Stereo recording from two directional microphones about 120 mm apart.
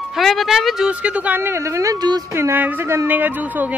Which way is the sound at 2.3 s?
20° right (ahead or behind).